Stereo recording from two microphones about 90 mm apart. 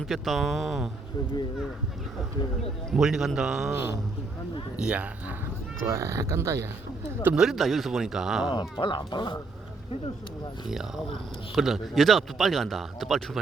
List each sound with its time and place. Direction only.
0.0 s speech: centre (ahead or behind)
2.9 s speech: 5° right (ahead or behind)
4.8 s speech: 15° right (ahead or behind)
5.8 s speech: 30° right (ahead or behind)
7.3 s speech: 5° right (ahead or behind)
8.8 s speech: 65° left (ahead or behind)
10.7 s speech: 5° right (ahead or behind)